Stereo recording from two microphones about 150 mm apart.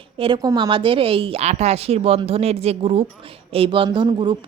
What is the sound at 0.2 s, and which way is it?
A woman's voice, 30° right (ahead or behind).